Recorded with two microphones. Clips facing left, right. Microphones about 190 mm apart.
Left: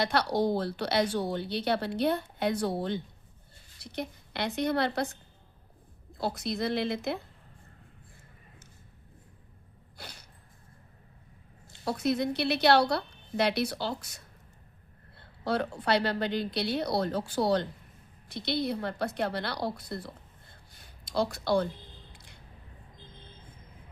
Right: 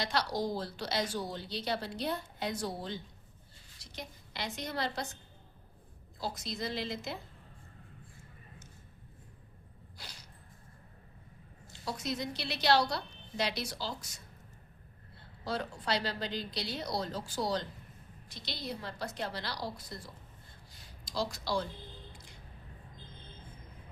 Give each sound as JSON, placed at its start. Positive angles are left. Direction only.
{"t": 0.0, "sound": "speech", "side_deg": 60}
{"t": 6.1, "sound": "speech", "side_deg": 60}
{"t": 10.0, "sound": "sneeze", "side_deg": 55}
{"t": 11.7, "sound": "speech", "side_deg": 60}
{"t": 20.7, "sound": "a sound", "side_deg": 60}